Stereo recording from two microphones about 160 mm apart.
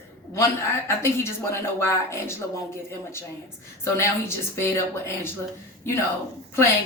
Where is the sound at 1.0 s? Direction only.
15° left (ahead or behind).